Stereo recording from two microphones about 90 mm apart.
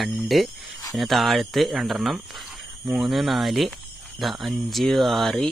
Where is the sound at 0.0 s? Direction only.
Centre (ahead or behind).